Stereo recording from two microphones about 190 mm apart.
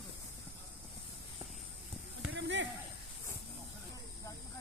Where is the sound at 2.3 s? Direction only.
75° right (ahead or behind).